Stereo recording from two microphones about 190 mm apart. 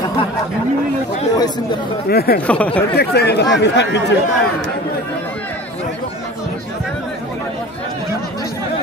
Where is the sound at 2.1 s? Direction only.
55° left (ahead or behind).